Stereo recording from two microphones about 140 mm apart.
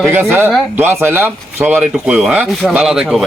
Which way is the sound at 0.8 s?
15° right (ahead or behind).